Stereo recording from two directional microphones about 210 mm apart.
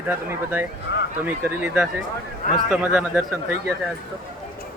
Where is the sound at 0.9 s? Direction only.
55° left (ahead or behind).